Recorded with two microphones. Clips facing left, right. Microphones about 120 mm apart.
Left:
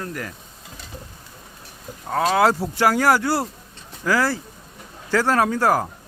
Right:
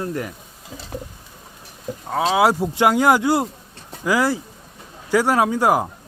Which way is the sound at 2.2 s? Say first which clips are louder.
Right 1 dB; 10° right (ahead or behind).